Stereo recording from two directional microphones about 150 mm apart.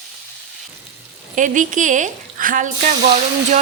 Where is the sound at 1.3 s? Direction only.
60° right (ahead or behind).